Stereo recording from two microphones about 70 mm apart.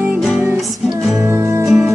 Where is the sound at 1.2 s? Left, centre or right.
Right.